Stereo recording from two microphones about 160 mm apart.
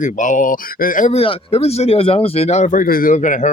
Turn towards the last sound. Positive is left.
turn(degrees=50)  # may be behind; listen again after turning